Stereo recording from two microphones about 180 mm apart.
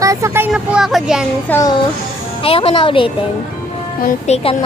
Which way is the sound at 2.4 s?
30° left (ahead or behind).